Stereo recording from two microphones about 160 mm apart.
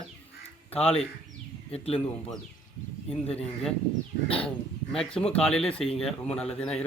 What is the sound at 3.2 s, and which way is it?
Speech, 40° left (ahead or behind).